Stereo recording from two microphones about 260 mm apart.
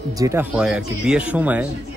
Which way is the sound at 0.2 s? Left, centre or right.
Centre.